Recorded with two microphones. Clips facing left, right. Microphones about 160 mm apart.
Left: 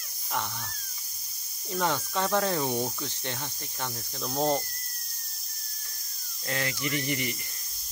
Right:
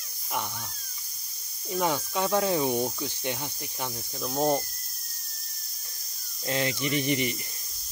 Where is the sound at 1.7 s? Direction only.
10° right (ahead or behind).